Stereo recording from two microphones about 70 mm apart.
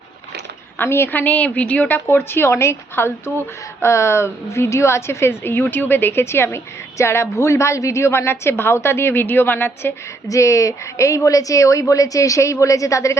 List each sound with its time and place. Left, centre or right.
0.8 s a woman's voice: left
2.0 s a woman's voice: left
10.2 s a woman's voice: left